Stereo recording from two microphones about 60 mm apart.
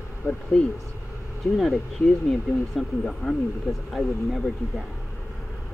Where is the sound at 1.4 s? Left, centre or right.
Centre.